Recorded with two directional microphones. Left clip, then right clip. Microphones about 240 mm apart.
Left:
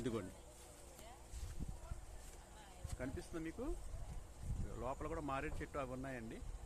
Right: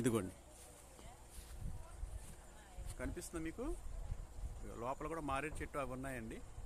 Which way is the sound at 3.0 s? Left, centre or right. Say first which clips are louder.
Right 1 dB; right.